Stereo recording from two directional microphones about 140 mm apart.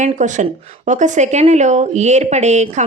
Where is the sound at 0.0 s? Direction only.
60° right (ahead or behind).